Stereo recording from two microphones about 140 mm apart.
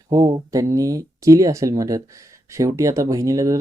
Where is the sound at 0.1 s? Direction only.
25° right (ahead or behind).